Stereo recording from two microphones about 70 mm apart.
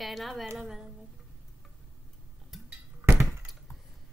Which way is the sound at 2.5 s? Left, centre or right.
Centre.